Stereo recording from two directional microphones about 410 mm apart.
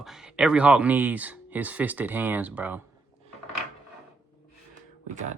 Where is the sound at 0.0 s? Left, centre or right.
Centre.